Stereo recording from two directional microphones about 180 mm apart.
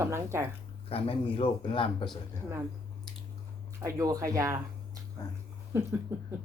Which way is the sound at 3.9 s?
20° right (ahead or behind).